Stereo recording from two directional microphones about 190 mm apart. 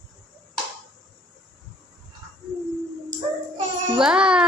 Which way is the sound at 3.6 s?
25° right (ahead or behind).